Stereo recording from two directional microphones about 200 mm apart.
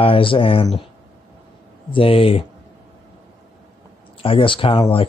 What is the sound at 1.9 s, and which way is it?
Speech, 30° left (ahead or behind).